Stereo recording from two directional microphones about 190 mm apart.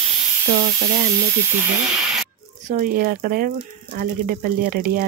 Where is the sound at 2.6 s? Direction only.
45° right (ahead or behind).